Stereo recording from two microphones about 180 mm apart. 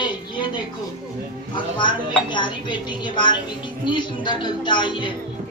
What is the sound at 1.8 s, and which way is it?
Speech, 25° left (ahead or behind).